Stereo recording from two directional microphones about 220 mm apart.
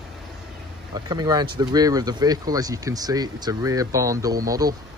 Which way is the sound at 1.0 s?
20° right (ahead or behind).